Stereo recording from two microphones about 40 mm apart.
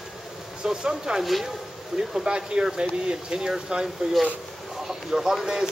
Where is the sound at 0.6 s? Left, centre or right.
Centre.